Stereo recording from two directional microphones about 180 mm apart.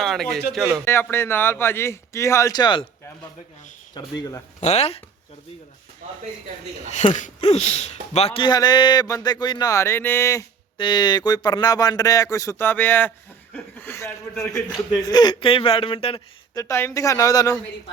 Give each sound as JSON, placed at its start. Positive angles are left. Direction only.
{"t": 0.0, "sound": "a man's voice", "side_deg": 0}
{"t": 1.1, "sound": "speech", "side_deg": 15}
{"t": 3.9, "sound": "a man's voice", "side_deg": 20}
{"t": 4.6, "sound": "speech", "side_deg": 35}
{"t": 6.9, "sound": "a man's voice", "side_deg": 40}
{"t": 16.6, "sound": "speech", "side_deg": 15}